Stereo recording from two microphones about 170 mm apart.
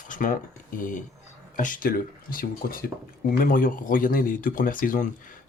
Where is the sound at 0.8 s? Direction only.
50° left (ahead or behind).